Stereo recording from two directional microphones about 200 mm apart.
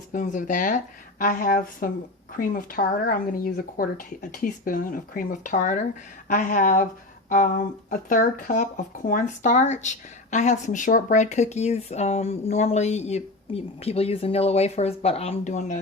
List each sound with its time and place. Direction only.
0.1 s speech: 40° left (ahead or behind)